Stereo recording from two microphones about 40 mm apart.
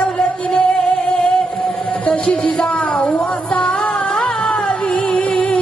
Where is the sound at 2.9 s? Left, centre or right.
Left.